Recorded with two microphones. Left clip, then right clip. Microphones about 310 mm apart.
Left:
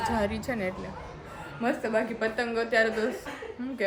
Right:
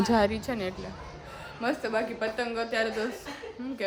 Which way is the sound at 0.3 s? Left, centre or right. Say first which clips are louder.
Even; centre.